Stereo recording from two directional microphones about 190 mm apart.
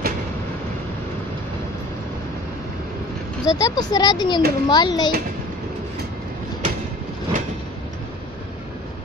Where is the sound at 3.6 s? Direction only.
20° left (ahead or behind).